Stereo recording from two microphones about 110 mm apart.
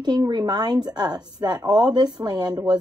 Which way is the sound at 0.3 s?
40° right (ahead or behind).